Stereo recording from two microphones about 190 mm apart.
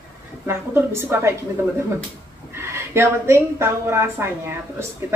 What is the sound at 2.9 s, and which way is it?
Speech, 15° right (ahead or behind).